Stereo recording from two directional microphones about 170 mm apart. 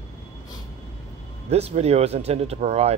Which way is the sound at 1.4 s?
40° right (ahead or behind).